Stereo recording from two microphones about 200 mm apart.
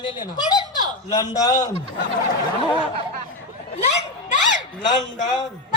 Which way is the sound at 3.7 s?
35° left (ahead or behind).